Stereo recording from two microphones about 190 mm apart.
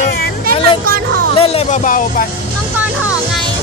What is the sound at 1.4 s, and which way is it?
Music, 30° left (ahead or behind).